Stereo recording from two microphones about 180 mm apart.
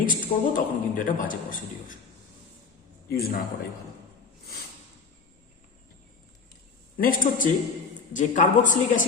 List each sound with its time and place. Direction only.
0.0 s a man's voice: 50° left (ahead or behind)
3.1 s a man's voice: 60° left (ahead or behind)
6.9 s a man's voice: 50° left (ahead or behind)